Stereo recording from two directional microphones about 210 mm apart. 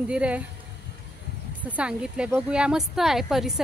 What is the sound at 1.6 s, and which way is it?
Speech, 5° right (ahead or behind).